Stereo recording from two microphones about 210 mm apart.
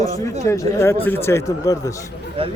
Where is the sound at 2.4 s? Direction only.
25° right (ahead or behind).